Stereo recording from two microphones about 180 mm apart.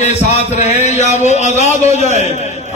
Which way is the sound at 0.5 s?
40° left (ahead or behind).